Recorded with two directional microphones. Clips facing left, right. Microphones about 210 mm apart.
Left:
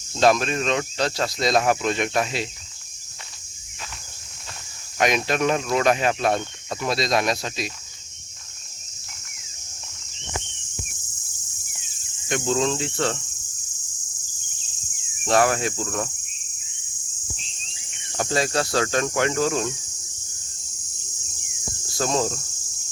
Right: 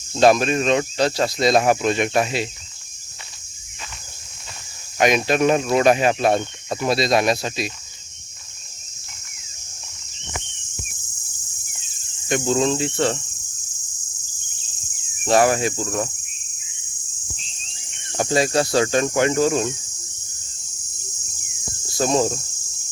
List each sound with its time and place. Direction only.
0.2 s speech: 5° right (ahead or behind)
4.9 s speech: 5° right (ahead or behind)
5.7 s cricket: 10° right (ahead or behind)
6.7 s speech: 5° right (ahead or behind)
12.3 s speech: 5° right (ahead or behind)
15.2 s speech: 5° right (ahead or behind)
18.2 s cricket: 15° right (ahead or behind)
21.9 s cricket: 15° right (ahead or behind)